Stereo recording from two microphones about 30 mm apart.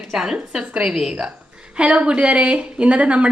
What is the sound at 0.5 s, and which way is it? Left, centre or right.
Speech, right.